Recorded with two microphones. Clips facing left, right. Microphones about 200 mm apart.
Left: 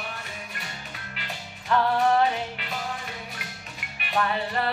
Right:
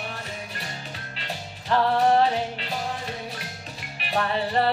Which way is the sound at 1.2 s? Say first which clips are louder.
Right 4 dB; 30° right (ahead or behind).